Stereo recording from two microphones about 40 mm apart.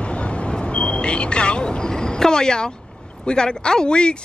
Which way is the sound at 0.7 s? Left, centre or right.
Left.